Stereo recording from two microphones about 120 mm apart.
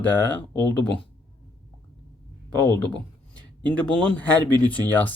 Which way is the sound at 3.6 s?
10° left (ahead or behind).